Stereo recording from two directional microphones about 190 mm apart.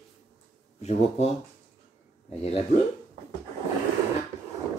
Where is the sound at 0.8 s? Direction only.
35° left (ahead or behind).